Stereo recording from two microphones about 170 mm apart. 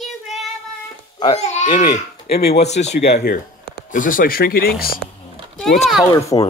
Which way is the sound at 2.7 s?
40° left (ahead or behind).